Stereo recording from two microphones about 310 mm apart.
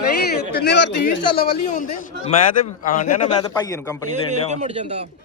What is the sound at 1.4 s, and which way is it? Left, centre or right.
A man's voice, left.